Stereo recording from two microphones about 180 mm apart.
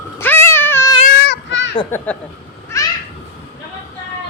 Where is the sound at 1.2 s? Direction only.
85° left.